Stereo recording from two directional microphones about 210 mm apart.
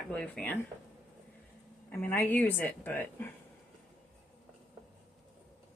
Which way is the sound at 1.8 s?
10° left (ahead or behind).